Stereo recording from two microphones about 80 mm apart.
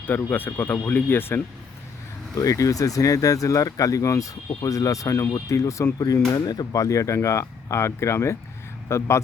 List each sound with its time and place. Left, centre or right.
0.0 s speech: left
2.3 s speech: left
6.3 s speech: left